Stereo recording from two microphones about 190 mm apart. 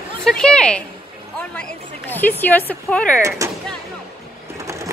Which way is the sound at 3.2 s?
15° right (ahead or behind).